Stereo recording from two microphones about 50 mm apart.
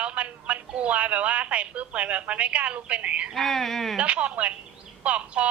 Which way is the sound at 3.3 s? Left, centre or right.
Centre.